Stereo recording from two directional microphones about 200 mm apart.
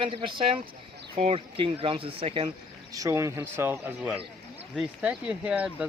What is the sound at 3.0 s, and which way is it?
Speech, 15° right (ahead or behind).